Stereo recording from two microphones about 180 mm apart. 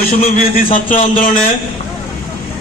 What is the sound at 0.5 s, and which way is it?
Speech, 45° left (ahead or behind).